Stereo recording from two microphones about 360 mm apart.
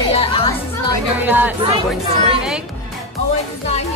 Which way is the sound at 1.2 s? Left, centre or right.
Centre.